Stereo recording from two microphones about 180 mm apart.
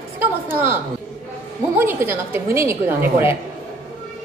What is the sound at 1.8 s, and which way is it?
A woman's voice, 15° right (ahead or behind).